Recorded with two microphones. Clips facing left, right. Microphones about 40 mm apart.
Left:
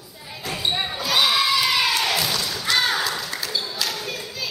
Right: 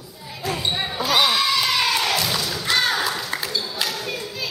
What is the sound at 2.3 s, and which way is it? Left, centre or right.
Thump, centre.